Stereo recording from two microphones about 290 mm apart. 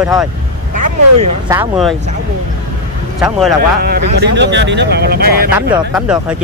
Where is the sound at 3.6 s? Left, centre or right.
Right.